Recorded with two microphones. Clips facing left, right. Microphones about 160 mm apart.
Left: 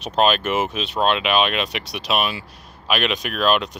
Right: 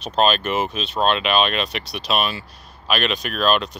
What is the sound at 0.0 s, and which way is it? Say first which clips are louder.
Speech: even; 15° left (ahead or behind).